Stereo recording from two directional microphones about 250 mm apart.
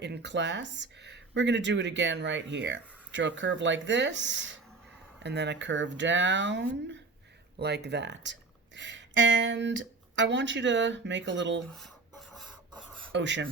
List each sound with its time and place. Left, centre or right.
0.0 s speech: right
13.1 s speech: right